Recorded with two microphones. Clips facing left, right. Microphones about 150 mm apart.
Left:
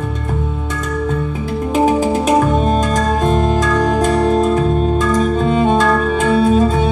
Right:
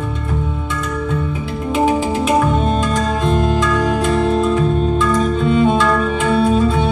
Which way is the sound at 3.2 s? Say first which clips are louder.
Even; 45° left (ahead or behind).